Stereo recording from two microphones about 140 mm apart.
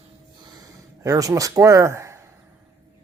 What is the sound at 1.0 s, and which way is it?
Speech, 25° right (ahead or behind).